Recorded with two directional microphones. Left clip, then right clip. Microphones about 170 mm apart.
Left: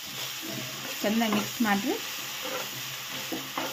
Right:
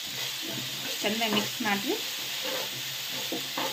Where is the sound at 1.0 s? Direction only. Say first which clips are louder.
Left 2 dB; 70° left (ahead or behind).